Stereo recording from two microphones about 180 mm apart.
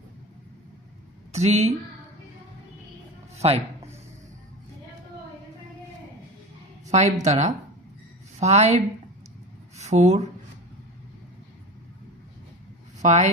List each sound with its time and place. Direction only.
1.3 s speech: 40° right (ahead or behind)
3.3 s speech: 35° right (ahead or behind)
6.9 s speech: 40° right (ahead or behind)
13.0 s speech: 40° right (ahead or behind)